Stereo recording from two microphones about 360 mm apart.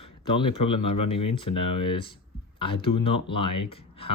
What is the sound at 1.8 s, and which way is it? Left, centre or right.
Speech, centre.